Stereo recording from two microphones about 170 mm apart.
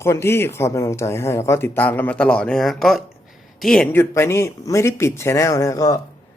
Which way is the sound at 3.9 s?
15° left (ahead or behind).